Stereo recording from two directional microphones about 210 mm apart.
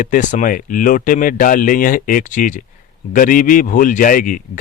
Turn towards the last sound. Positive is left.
turn(degrees=40)  # may be behind; listen again after turning